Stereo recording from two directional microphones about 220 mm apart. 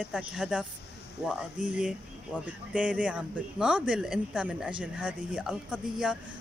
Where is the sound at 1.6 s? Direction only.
5° right (ahead or behind).